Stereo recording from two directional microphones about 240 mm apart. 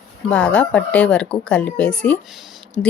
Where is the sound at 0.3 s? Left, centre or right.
Centre.